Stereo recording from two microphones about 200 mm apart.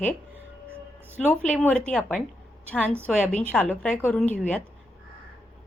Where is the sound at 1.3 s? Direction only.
5° left (ahead or behind).